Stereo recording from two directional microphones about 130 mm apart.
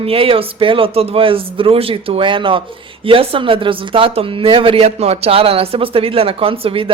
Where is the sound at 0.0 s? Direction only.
45° right (ahead or behind).